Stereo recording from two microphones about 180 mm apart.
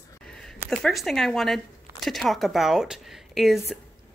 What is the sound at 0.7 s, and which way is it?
A woman's voice, centre (ahead or behind).